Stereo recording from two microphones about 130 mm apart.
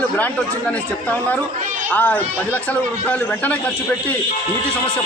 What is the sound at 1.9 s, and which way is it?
A man's voice, 15° left (ahead or behind).